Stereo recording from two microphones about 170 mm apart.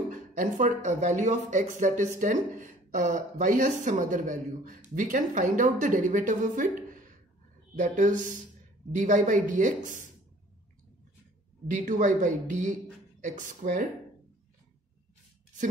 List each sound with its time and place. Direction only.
0.1 s speech: 50° right (ahead or behind)
11.6 s speech: 50° right (ahead or behind)